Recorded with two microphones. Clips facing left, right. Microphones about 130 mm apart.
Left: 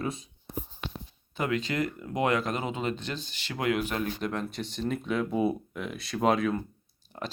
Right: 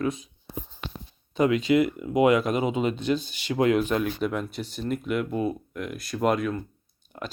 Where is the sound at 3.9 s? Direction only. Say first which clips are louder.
Right 5 dB; 10° right (ahead or behind).